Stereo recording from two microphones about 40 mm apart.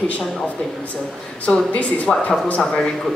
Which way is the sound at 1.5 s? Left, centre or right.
Left.